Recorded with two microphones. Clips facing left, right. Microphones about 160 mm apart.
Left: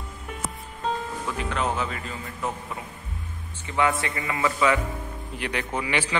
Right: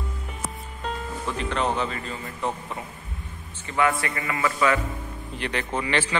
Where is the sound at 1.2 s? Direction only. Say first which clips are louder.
Right 3 dB; 5° left (ahead or behind).